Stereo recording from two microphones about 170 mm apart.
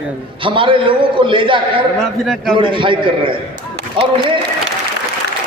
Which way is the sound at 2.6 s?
30° right (ahead or behind).